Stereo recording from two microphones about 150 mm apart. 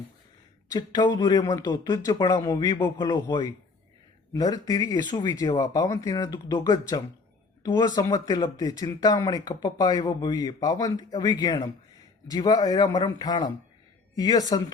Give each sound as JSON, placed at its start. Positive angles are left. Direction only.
{"t": 0.7, "sound": "speech", "side_deg": 30}